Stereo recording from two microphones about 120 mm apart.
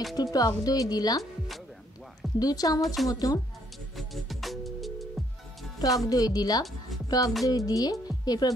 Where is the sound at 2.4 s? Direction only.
30° left (ahead or behind).